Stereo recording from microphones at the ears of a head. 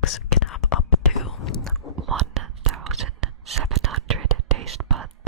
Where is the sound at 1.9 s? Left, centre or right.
Right.